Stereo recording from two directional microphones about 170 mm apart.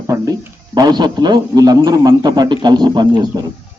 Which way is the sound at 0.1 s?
20° right (ahead or behind).